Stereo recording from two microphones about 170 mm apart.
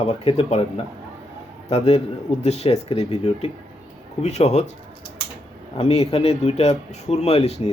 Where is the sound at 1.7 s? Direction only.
35° left (ahead or behind).